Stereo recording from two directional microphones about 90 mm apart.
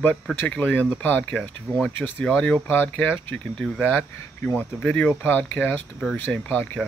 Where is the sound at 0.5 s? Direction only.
15° left (ahead or behind).